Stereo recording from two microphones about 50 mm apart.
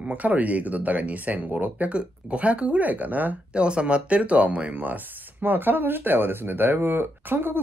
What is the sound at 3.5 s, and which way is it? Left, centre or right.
Speech, right.